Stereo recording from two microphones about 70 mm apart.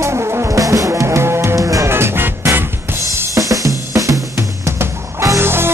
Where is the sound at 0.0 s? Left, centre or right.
Right.